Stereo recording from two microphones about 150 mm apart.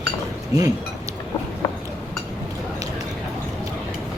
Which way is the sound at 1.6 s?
25° left (ahead or behind).